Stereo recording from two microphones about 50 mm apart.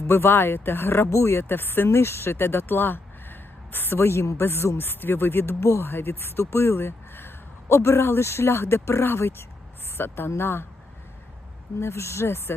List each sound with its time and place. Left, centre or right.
0.1 s speech: left
1.1 s speech: left
11.8 s speech: left